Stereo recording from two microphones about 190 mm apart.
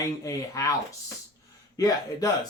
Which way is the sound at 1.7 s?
20° left (ahead or behind).